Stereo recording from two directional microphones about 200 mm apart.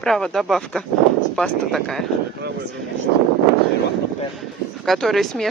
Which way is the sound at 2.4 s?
55° right (ahead or behind).